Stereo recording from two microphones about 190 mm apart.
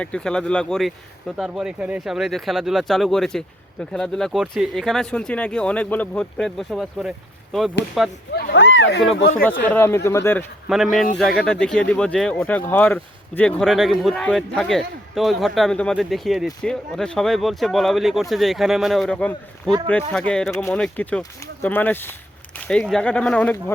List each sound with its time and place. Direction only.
0.0 s speech: 5° left (ahead or behind)
8.3 s speech: 60° left (ahead or behind)
9.4 s speech: 10° left (ahead or behind)
10.7 s speech: centre (ahead or behind)